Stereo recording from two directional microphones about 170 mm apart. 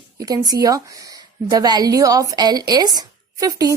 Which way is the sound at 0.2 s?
20° right (ahead or behind).